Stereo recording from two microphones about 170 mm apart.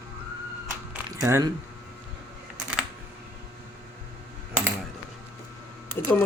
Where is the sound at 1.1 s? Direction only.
20° right (ahead or behind).